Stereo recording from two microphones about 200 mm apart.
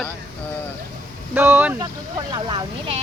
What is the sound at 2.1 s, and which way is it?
Speech, 20° right (ahead or behind).